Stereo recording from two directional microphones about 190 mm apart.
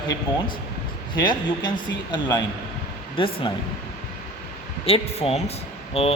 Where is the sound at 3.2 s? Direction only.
25° left (ahead or behind).